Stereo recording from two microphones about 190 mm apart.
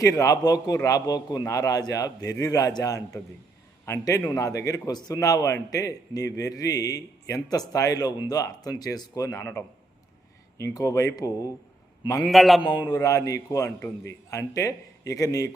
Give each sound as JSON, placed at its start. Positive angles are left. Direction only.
{"t": 0.0, "sound": "a man's voice", "side_deg": 15}
{"t": 12.3, "sound": "a man's voice", "side_deg": 0}
{"t": 12.8, "sound": "a man's voice", "side_deg": 15}
{"t": 13.7, "sound": "a man's voice", "side_deg": 5}
{"t": 14.3, "sound": "a man's voice", "side_deg": 15}